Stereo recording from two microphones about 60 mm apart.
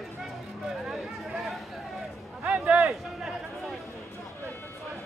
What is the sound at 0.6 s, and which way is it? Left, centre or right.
Chatter, centre.